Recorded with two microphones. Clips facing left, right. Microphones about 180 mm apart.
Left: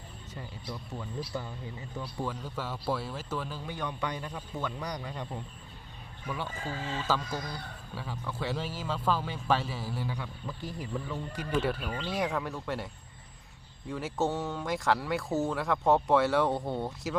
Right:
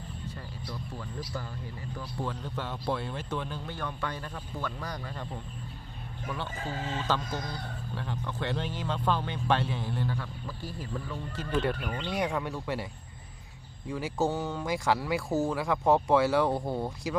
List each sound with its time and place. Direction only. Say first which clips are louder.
0.3 s music: left 2 dB; 20° left (ahead or behind)
2.2 s speech: right 1 dB; 5° left (ahead or behind)
3.8 s speech: left 2 dB; 15° left (ahead or behind)
6.3 s speech: even; 10° left (ahead or behind)